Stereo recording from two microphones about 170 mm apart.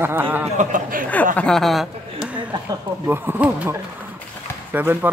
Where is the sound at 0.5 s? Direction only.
50° right (ahead or behind).